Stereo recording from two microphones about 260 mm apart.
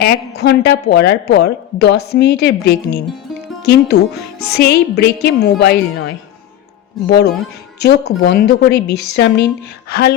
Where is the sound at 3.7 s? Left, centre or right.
Left.